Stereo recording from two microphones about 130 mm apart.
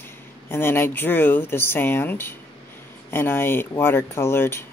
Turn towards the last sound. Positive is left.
turn(degrees=20)  # may be behind; listen again after turning